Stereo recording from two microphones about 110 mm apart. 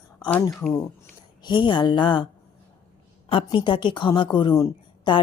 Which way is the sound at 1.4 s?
45° left (ahead or behind).